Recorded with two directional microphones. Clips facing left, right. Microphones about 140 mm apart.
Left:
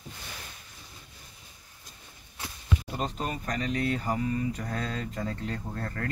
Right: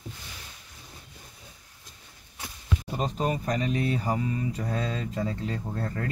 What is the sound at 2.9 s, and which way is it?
Speech, 5° right (ahead or behind).